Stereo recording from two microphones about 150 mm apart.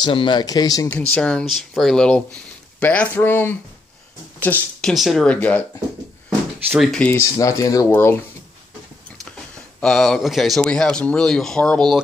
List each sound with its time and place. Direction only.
0.0 s speech: 35° left (ahead or behind)
0.8 s speech: 10° left (ahead or behind)
4.9 s speech: centre (ahead or behind)
6.7 s speech: centre (ahead or behind)
7.0 s speech: 10° left (ahead or behind)
7.3 s speech: 25° left (ahead or behind)
9.8 s speech: 5° left (ahead or behind)